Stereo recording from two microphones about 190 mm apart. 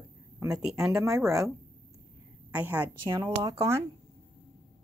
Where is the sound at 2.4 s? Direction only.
10° right (ahead or behind).